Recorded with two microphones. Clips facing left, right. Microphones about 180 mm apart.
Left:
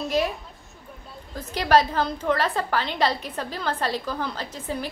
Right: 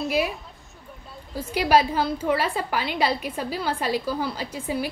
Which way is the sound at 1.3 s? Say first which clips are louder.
Even; 10° right (ahead or behind).